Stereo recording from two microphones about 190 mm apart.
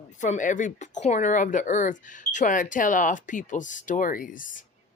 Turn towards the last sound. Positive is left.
turn(degrees=45)  # may be behind; listen again after turning